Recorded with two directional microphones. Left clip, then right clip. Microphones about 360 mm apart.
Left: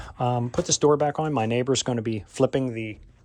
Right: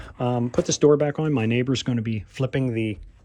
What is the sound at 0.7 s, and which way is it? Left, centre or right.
Speech, centre.